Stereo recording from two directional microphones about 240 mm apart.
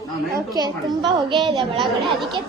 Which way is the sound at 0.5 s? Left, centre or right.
Centre.